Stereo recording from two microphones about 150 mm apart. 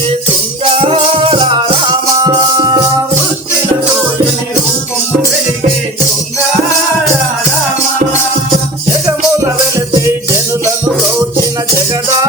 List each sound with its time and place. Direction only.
0.6 s music: 40° right (ahead or behind)